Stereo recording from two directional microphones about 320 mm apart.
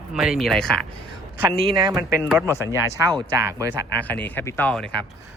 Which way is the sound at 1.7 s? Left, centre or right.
Centre.